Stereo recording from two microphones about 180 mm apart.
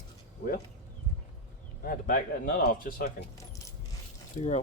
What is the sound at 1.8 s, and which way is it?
Speech, 50° left (ahead or behind).